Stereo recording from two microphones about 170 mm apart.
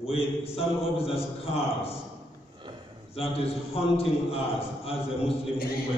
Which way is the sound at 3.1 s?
35° left (ahead or behind).